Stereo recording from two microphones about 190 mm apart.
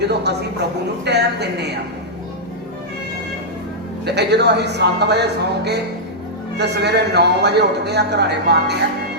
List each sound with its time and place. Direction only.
0.0 s a man's voice: 60° right (ahead or behind)
4.0 s a man's voice: 60° right (ahead or behind)